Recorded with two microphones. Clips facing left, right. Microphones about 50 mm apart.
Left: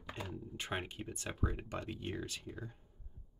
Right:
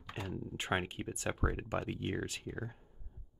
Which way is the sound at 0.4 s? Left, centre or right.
Right.